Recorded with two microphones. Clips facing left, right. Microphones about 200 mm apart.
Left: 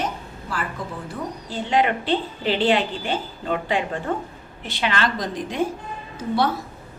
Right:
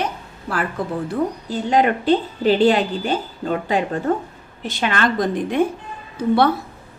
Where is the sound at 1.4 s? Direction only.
45° right (ahead or behind).